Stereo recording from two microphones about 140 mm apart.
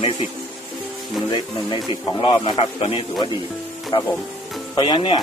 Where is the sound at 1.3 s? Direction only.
35° left (ahead or behind).